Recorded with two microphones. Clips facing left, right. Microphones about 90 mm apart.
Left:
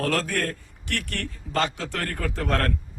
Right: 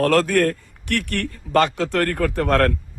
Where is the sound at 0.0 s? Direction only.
60° right (ahead or behind).